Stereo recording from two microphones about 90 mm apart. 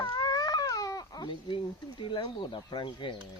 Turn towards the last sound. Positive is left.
turn(degrees=65)  # may be behind; listen again after turning